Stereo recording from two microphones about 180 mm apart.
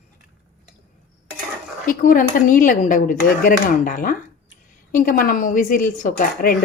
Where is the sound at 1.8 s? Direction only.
50° left (ahead or behind).